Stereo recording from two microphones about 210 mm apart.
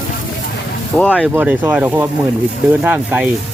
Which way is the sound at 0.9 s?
5° left (ahead or behind).